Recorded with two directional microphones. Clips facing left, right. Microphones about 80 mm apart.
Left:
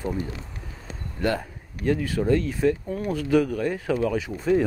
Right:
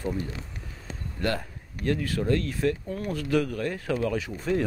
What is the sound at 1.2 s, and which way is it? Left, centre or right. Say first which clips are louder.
Speech: left 4 dB; centre.